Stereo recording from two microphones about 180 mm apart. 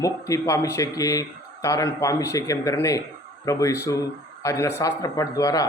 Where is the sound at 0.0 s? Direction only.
15° left (ahead or behind).